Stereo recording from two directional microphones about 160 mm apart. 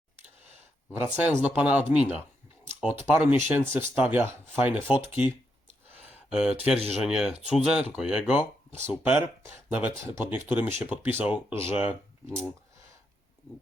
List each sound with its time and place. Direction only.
0.9 s speech: 10° right (ahead or behind)
3.5 s speech: 15° right (ahead or behind)
6.1 s a sound: 5° right (ahead or behind)
6.7 s speech: 40° right (ahead or behind)
7.0 s speech: 5° right (ahead or behind)